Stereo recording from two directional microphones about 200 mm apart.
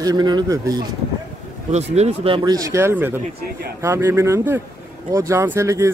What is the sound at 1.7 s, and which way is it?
Speech, 35° right (ahead or behind).